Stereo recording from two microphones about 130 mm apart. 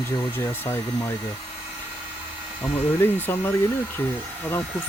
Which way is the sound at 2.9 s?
15° left (ahead or behind).